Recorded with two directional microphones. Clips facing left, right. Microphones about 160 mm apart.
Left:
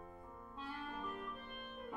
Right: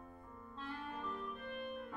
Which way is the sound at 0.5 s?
10° left (ahead or behind).